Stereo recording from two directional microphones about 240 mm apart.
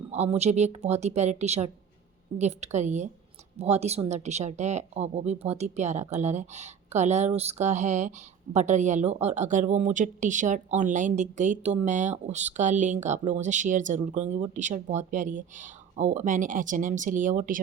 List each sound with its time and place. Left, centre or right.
0.1 s speech: right